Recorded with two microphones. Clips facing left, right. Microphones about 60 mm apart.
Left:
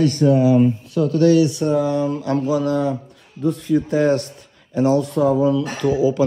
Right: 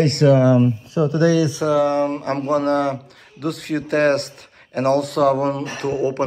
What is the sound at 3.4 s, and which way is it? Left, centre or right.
Speech, right.